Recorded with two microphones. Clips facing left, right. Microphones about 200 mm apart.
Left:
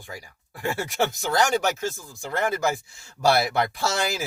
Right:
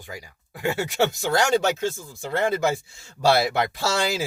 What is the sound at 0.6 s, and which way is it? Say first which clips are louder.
Speech: right 3 dB; 20° right (ahead or behind).